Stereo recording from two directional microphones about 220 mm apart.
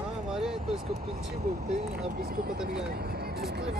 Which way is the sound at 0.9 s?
45° right (ahead or behind).